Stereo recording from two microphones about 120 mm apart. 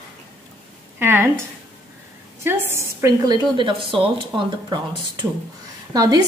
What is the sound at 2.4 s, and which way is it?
A woman's voice, 20° right (ahead or behind).